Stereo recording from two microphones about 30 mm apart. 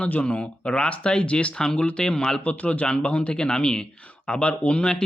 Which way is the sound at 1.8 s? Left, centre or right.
Left.